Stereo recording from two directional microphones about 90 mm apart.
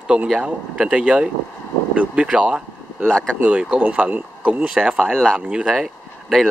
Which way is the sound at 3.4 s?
10° right (ahead or behind).